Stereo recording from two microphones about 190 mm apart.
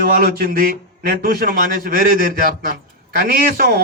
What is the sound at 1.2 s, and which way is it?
A man's voice, 50° right (ahead or behind).